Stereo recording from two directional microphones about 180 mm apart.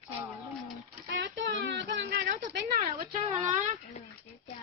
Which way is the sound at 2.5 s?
50° right (ahead or behind).